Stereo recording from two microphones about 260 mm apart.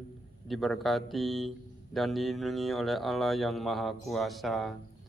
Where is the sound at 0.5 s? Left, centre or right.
Centre.